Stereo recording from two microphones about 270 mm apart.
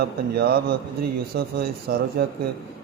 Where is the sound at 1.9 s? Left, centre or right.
Right.